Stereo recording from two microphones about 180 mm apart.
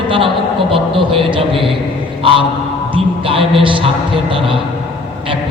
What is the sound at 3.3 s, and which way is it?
Speech, 30° right (ahead or behind).